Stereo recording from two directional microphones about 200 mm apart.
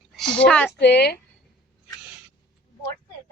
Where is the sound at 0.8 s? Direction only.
55° left (ahead or behind).